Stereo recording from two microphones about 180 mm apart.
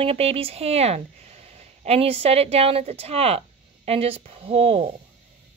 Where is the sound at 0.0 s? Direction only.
35° right (ahead or behind).